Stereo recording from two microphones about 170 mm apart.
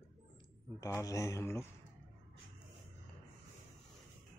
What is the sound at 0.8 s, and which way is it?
Speech, 15° left (ahead or behind).